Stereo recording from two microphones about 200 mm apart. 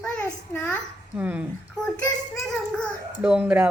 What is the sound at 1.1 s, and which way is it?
A woman's voice, 5° right (ahead or behind).